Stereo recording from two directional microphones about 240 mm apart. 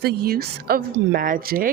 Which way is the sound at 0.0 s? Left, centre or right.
Right.